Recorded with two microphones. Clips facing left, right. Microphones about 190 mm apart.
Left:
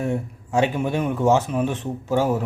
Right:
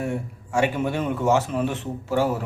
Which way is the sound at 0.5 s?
15° left (ahead or behind).